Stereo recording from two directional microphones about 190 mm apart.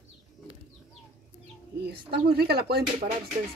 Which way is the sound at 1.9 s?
55° right (ahead or behind).